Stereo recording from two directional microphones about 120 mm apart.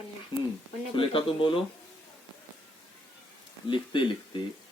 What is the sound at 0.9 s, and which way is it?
Speech, 50° left (ahead or behind).